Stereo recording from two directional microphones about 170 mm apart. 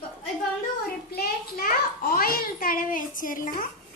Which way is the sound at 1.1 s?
60° left (ahead or behind).